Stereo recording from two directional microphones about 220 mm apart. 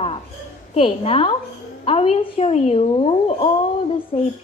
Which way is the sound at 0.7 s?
25° left (ahead or behind).